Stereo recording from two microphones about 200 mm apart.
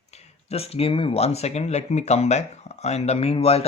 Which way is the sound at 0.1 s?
30° left (ahead or behind).